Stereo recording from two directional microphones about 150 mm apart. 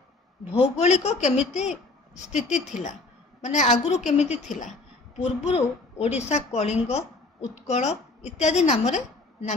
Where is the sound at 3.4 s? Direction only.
55° left (ahead or behind).